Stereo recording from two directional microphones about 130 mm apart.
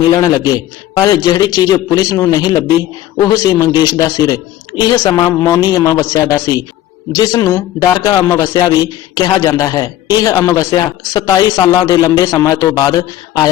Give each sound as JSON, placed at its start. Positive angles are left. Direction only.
{"t": 0.2, "sound": "a man's voice", "side_deg": 25}